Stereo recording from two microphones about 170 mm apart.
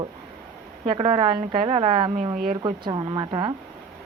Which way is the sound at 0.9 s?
35° right (ahead or behind).